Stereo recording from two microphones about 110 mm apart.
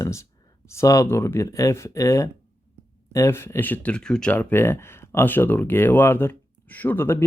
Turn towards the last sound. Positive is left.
turn(degrees=20)  # may be behind; listen again after turning